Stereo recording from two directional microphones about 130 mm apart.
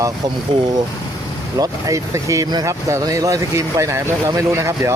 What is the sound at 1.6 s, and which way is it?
Speech, 25° right (ahead or behind).